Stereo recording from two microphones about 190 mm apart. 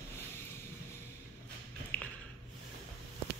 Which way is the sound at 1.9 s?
5° left (ahead or behind).